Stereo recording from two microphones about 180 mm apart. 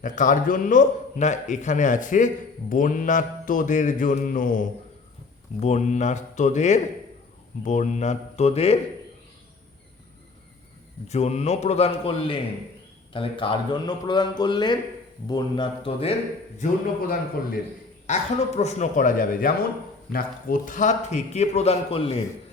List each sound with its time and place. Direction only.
0.0 s a man's voice: 45° left (ahead or behind)
11.1 s a man's voice: 35° left (ahead or behind)
16.6 s a man's voice: 50° left (ahead or behind)
18.0 s a man's voice: 40° left (ahead or behind)